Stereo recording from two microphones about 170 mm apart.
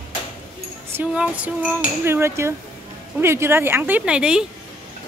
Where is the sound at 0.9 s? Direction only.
5° right (ahead or behind).